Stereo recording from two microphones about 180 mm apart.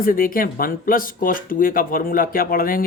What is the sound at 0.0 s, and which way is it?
Speech, 50° left (ahead or behind).